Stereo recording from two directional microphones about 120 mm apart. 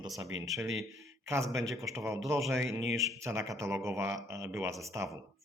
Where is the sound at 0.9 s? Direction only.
25° right (ahead or behind).